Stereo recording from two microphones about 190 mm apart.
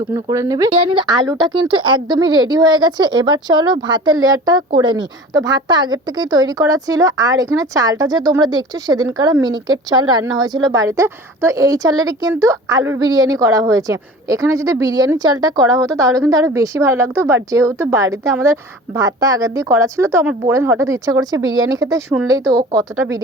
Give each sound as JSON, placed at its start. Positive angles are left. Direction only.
{"t": 0.1, "sound": "speech", "side_deg": -15}
{"t": 0.7, "sound": "a woman's voice", "side_deg": -30}